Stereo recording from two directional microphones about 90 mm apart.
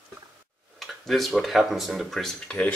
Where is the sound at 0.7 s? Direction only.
Centre (ahead or behind).